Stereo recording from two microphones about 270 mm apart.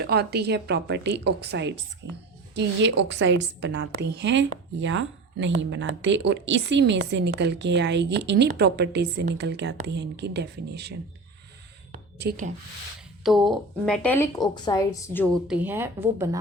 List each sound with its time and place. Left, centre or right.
0.0 s a woman's voice: right
12.2 s a woman's voice: right
13.2 s a woman's voice: centre